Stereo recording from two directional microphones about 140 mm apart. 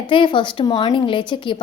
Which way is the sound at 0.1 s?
35° left (ahead or behind).